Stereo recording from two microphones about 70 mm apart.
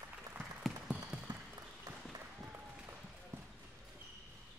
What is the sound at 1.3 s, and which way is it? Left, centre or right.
Applause, right.